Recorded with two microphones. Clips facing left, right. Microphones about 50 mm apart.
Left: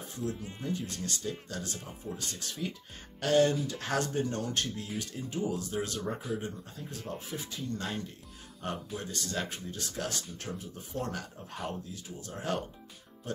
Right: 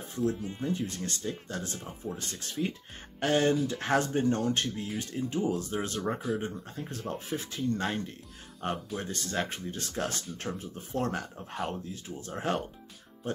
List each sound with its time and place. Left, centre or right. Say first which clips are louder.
0.1 s speech: right 7 dB; right
2.0 s speech: right 1 dB; centre
3.2 s speech: even; right
11.6 s speech: right 4 dB; centre
11.9 s speech: right 4 dB; right